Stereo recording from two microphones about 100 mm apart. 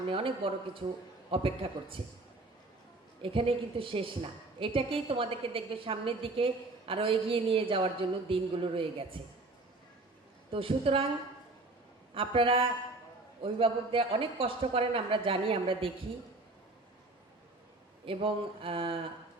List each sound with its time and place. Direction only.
0.1 s a woman's voice: 65° right (ahead or behind)
3.2 s a woman's voice: 65° right (ahead or behind)
10.5 s a man's voice: 65° right (ahead or behind)
12.1 s a woman's voice: 65° right (ahead or behind)
18.0 s a woman's voice: 65° right (ahead or behind)